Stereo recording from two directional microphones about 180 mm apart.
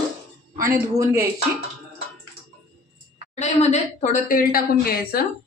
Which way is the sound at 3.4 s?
40° left (ahead or behind).